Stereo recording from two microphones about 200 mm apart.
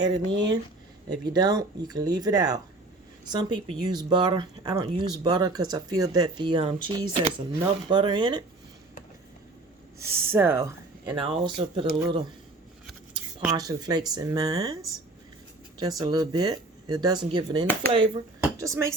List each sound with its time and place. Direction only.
0.0 s speech: 20° right (ahead or behind)
10.0 s speech: 10° right (ahead or behind)
13.4 s speech: 20° right (ahead or behind)
15.8 s speech: 20° right (ahead or behind)
18.6 s speech: 15° right (ahead or behind)